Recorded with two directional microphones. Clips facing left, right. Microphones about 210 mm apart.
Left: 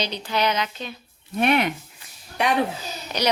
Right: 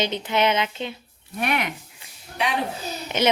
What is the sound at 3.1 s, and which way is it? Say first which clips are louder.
Speech: right 3 dB; 25° right (ahead or behind).